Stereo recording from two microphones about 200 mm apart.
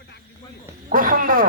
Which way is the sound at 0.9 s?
45° right (ahead or behind).